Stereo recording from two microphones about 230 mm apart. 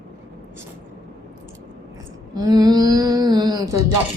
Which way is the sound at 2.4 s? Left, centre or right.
Centre.